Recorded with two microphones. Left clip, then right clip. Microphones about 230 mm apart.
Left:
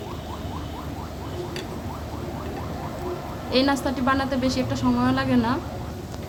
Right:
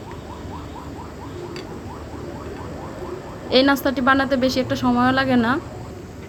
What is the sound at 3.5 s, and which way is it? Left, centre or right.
Speech, centre.